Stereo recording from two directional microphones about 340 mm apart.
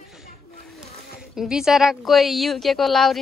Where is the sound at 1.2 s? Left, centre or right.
Centre.